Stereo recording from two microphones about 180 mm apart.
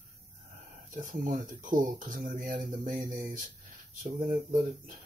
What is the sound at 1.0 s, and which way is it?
Speech, 50° right (ahead or behind).